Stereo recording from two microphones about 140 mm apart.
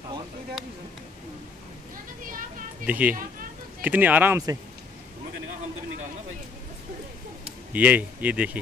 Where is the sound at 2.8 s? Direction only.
10° right (ahead or behind).